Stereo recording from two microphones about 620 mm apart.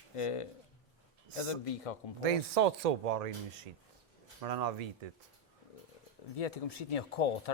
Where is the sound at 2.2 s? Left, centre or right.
Right.